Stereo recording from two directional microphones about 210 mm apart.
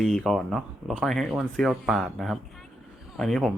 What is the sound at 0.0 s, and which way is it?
Speech, centre (ahead or behind).